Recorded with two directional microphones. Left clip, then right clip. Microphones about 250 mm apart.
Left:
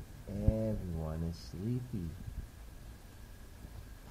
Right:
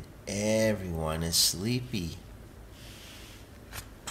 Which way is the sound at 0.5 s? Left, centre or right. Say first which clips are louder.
Right 12 dB; right.